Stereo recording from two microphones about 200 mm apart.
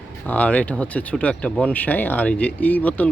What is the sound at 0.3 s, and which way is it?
Speech, 5° left (ahead or behind).